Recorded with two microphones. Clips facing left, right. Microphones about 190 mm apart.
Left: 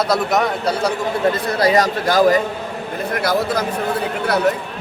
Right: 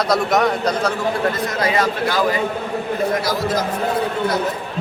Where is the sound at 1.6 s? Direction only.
40° left (ahead or behind).